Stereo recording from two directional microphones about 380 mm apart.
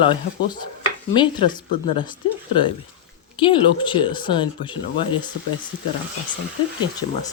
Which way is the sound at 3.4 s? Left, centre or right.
Centre.